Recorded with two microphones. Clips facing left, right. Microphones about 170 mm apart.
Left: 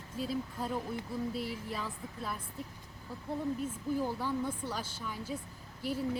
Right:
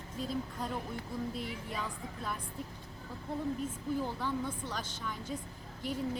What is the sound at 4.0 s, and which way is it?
A woman's voice, 10° left (ahead or behind).